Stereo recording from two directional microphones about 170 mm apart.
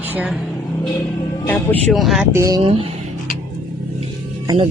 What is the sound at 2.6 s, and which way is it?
Speech, 35° right (ahead or behind).